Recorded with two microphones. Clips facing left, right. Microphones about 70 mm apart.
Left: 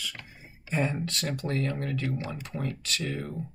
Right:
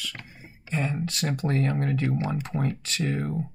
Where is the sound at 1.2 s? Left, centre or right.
Right.